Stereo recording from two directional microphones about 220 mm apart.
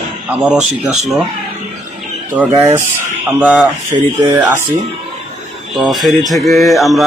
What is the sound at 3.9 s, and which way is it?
Speech, 25° right (ahead or behind).